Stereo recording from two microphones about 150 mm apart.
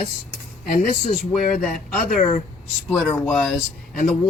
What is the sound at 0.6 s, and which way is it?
Speech, 65° left (ahead or behind).